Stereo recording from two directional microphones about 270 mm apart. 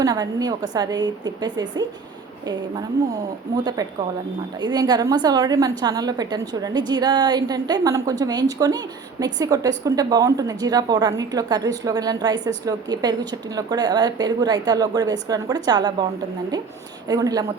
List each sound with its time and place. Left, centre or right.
0.0 s a woman's voice: centre
3.5 s a woman's voice: centre
17.1 s a woman's voice: centre